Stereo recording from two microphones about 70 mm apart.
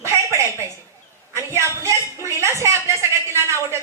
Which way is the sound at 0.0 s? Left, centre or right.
Right.